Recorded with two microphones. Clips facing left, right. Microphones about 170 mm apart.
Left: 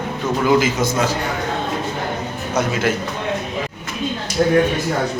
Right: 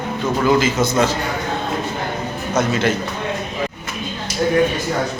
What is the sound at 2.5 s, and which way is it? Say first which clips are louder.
Speech: right 1 dB; 10° left (ahead or behind).